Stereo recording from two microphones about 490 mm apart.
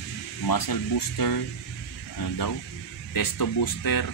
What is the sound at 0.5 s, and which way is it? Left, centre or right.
Speech, left.